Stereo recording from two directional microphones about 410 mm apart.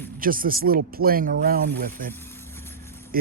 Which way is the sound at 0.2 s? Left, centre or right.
Right.